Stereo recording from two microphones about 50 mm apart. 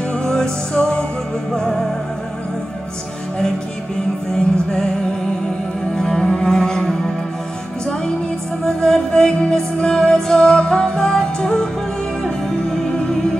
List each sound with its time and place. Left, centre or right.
0.1 s music: centre
1.5 s music: centre
4.6 s music: centre
5.9 s music: centre
8.6 s music: centre